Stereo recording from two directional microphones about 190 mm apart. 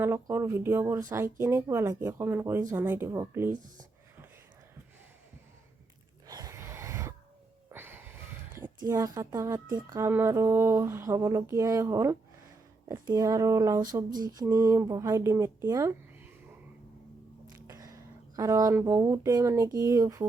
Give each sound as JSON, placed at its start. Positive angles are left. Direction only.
{"t": 0.0, "sound": "speech", "side_deg": -15}
{"t": 6.2, "sound": "a sound", "side_deg": -20}
{"t": 8.9, "sound": "speech", "side_deg": -15}
{"t": 17.5, "sound": "speech", "side_deg": -15}